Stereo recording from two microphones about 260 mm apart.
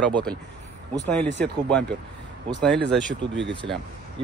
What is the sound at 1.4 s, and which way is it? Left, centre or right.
Speech, centre.